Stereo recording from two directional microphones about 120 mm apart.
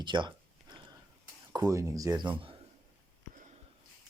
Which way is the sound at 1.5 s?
30° right (ahead or behind).